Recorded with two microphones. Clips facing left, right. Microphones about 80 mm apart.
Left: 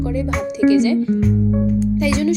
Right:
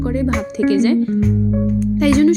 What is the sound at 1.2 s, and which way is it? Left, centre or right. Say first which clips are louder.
Music: even; centre.